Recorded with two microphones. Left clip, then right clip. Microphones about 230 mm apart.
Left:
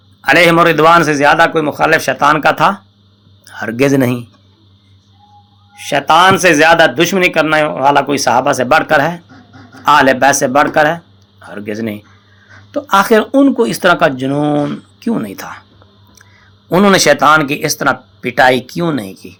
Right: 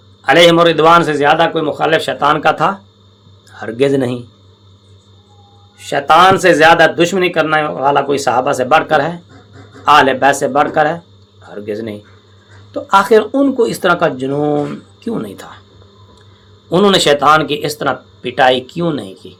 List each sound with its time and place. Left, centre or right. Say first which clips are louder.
0.2 s a man's voice: even; left
2.5 s speech: left 2 dB; left
3.4 s a sound: left 5 dB; left
3.7 s a man's voice: left 1 dB; left
5.9 s speech: even; left
12.9 s speech: even; left
16.6 s speech: left 1 dB; left